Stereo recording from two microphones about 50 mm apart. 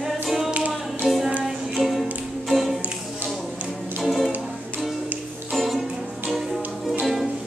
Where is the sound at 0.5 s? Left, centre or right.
Right.